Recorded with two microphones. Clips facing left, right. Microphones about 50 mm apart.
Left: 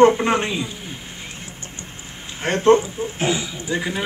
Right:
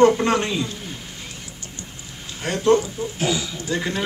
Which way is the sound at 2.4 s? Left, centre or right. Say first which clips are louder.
Left 3 dB; left.